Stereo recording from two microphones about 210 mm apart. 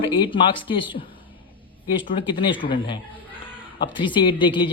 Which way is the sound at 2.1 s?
25° left (ahead or behind).